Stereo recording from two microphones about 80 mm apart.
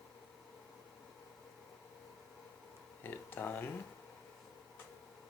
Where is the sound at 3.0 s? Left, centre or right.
Left.